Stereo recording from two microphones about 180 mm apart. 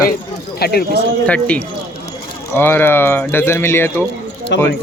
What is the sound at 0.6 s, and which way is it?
Speech, 60° left (ahead or behind).